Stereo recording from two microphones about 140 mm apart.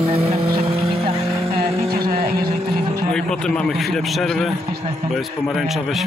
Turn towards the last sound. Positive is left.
turn(degrees=0)  # may be behind; listen again after turning